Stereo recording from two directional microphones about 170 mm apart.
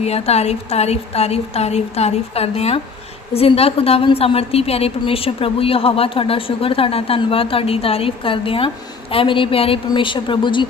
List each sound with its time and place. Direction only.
0.0 s a woman's voice: 40° left (ahead or behind)